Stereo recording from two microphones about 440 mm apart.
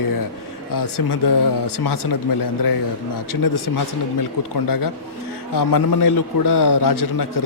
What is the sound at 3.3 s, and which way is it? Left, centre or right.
A man's voice, left.